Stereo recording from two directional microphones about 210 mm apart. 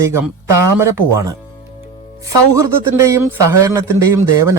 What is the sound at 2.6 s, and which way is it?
Speech, 15° right (ahead or behind).